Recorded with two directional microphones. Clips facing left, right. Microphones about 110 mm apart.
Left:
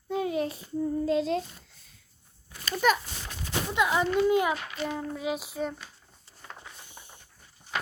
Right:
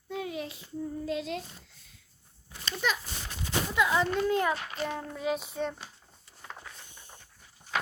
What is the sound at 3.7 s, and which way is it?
A child's voice, 20° left (ahead or behind).